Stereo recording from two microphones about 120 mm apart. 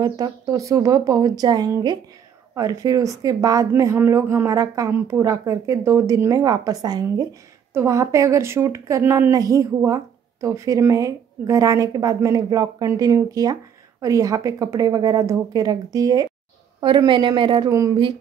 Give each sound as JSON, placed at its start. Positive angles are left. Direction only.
{"t": 0.0, "sound": "a woman's voice", "side_deg": -30}
{"t": 16.8, "sound": "a woman's voice", "side_deg": -40}
{"t": 17.6, "sound": "speech", "side_deg": -25}